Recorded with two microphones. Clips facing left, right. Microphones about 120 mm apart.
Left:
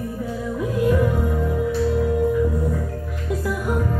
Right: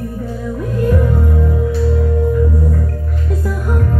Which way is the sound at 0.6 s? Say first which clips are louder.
Right 2 dB; 5° left (ahead or behind).